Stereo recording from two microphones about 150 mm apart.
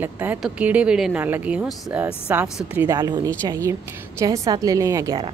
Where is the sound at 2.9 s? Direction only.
25° right (ahead or behind).